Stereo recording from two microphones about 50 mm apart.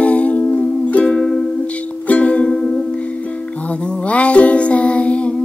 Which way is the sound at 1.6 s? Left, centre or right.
Left.